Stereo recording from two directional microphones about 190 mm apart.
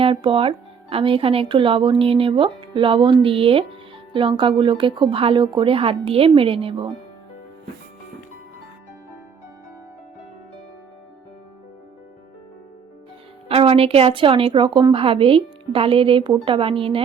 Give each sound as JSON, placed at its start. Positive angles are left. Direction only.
{"t": 0.0, "sound": "speech", "side_deg": -25}
{"t": 13.5, "sound": "speech", "side_deg": -30}